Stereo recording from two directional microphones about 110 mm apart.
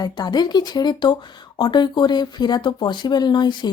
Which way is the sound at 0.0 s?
40° left (ahead or behind).